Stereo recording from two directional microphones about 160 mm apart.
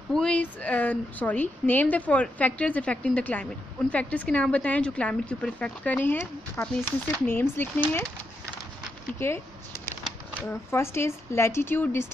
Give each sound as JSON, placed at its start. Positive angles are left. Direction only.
{"t": 0.1, "sound": "a woman's voice", "side_deg": 5}
{"t": 9.2, "sound": "a woman's voice", "side_deg": 15}
{"t": 10.5, "sound": "a woman's voice", "side_deg": 15}